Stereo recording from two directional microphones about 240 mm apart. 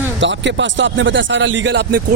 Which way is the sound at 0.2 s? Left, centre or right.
Right.